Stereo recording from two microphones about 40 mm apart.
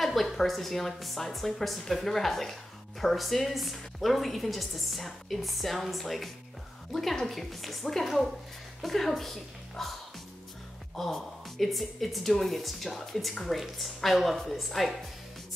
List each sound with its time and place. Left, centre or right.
0.0 s a woman's voice: centre
11.0 s a woman's voice: centre